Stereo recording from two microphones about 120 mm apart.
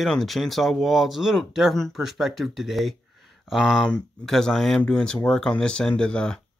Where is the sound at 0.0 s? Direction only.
Centre (ahead or behind).